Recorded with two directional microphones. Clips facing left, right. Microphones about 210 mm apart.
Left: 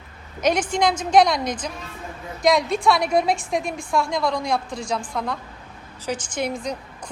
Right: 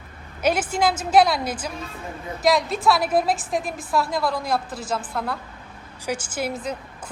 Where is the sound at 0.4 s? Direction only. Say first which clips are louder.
Left 1 dB; 5° right (ahead or behind).